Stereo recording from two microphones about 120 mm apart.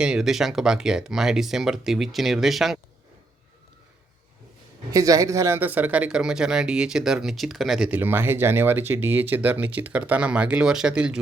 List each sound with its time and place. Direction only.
0.0 s speech: 5° right (ahead or behind)
4.9 s a man's voice: 30° right (ahead or behind)
5.5 s speech: 15° right (ahead or behind)